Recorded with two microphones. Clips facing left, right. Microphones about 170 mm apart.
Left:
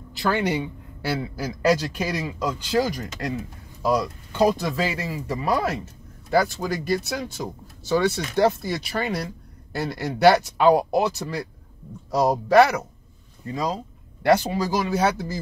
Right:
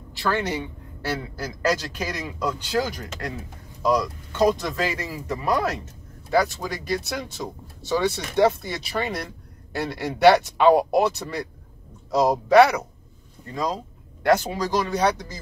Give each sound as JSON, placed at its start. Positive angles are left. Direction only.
{"t": 0.2, "sound": "a man's voice", "side_deg": 15}